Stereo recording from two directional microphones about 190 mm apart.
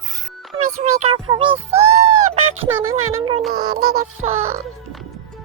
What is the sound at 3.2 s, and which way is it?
Child singing, 30° right (ahead or behind).